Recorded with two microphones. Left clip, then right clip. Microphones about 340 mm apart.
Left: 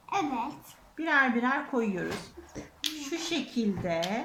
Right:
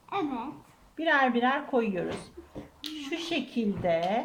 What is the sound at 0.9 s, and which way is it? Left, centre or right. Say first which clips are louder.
A woman's voice: right 1 dB; right.